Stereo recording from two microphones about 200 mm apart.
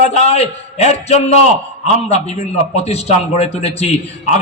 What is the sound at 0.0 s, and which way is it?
A man's voice, 30° left (ahead or behind).